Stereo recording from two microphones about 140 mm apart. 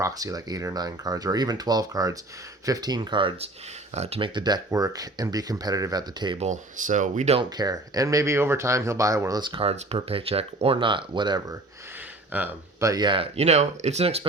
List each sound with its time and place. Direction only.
0.0 s speech: 25° right (ahead or behind)
3.9 s speech: 50° right (ahead or behind)
4.4 s speech: 30° right (ahead or behind)
6.4 s speech: 60° right (ahead or behind)
7.5 s speech: 30° right (ahead or behind)
12.3 s speech: 10° right (ahead or behind)
12.9 s speech: 35° right (ahead or behind)